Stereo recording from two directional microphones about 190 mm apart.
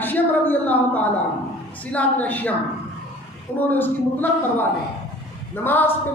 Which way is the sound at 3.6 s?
10° left (ahead or behind).